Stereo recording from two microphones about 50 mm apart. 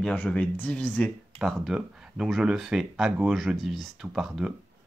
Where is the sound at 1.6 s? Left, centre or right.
Centre.